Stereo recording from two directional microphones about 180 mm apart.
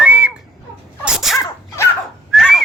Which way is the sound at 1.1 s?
Centre (ahead or behind).